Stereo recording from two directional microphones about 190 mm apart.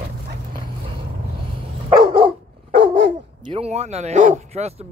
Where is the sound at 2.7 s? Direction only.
65° right (ahead or behind).